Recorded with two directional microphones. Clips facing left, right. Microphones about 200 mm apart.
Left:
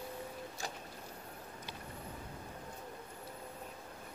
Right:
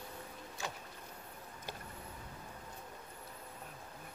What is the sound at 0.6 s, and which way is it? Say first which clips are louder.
Vehicle: right 2 dB; 35° left (ahead or behind).